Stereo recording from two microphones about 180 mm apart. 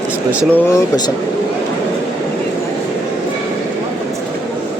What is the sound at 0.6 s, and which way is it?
Speech, 15° left (ahead or behind).